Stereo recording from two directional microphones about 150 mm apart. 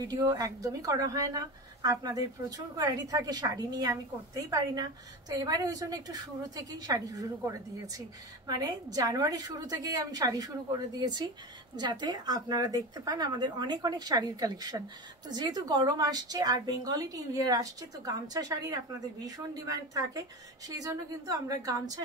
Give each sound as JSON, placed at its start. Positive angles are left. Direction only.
{"t": 0.1, "sound": "a woman's voice", "side_deg": -25}